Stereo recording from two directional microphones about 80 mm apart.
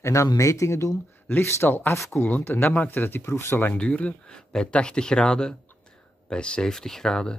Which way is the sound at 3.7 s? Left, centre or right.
Centre.